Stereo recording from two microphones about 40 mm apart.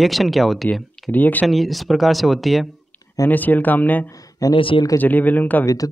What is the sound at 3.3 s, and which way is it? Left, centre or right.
Speech, left.